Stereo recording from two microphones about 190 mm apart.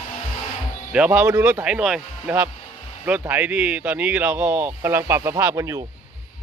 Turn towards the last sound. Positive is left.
turn(degrees=-15)  # may be behind; listen again after turning